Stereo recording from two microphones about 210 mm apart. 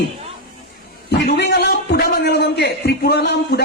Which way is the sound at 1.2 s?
50° left (ahead or behind).